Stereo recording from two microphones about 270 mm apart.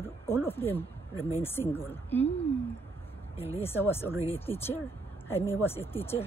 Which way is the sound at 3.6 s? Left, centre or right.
Centre.